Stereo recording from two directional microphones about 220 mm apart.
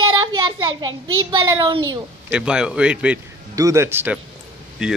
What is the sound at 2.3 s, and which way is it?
Child singing, 5° right (ahead or behind).